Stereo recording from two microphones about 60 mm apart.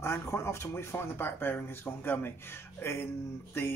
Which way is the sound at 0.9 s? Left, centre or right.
Left.